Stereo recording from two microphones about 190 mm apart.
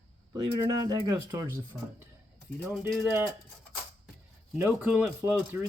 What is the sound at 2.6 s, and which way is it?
Speech, centre (ahead or behind).